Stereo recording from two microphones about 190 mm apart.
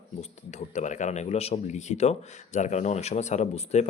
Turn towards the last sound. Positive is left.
turn(degrees=35)  # may be behind; listen again after turning